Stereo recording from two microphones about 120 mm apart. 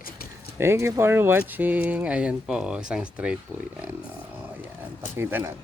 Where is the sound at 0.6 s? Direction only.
20° right (ahead or behind).